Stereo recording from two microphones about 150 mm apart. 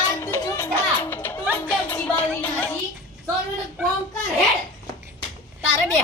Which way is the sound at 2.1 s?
15° left (ahead or behind).